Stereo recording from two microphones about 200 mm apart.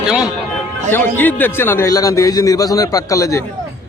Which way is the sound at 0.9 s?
10° left (ahead or behind).